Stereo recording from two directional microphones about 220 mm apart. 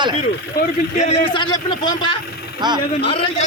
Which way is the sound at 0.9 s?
30° left (ahead or behind).